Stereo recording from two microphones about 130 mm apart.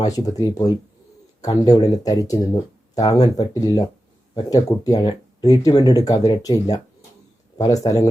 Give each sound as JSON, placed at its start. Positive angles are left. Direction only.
{"t": 0.0, "sound": "speech", "side_deg": 30}